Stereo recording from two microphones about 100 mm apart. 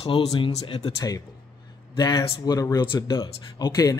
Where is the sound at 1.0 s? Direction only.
35° left (ahead or behind).